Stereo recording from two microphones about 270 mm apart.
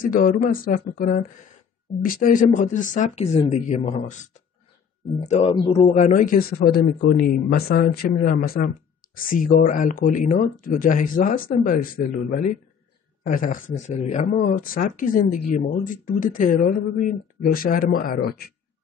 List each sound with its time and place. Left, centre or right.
0.0 s speech: left